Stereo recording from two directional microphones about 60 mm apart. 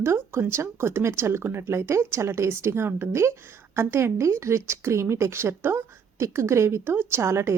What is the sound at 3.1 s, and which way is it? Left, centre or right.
Speech, right.